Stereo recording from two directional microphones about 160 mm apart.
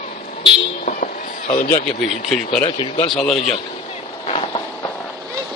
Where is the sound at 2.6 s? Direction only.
35° left (ahead or behind).